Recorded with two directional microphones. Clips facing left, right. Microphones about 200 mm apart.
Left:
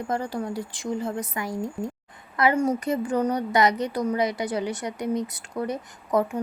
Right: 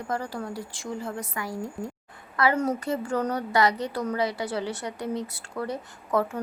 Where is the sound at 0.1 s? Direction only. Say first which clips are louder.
Left 3 dB; 20° left (ahead or behind).